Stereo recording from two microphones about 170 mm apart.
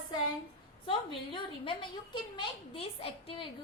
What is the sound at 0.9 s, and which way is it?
A woman's voice, 30° left (ahead or behind).